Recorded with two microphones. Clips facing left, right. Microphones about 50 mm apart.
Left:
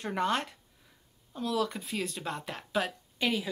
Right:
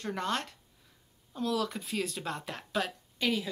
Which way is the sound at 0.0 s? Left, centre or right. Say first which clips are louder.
Left 3 dB; centre.